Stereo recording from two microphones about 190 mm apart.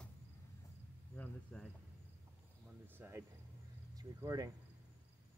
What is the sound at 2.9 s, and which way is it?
Speech, 10° right (ahead or behind).